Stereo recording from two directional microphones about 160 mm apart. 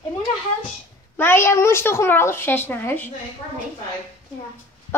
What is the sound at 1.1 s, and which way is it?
A woman's voice, 15° left (ahead or behind).